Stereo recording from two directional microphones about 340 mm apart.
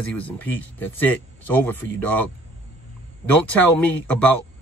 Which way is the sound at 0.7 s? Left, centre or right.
Centre.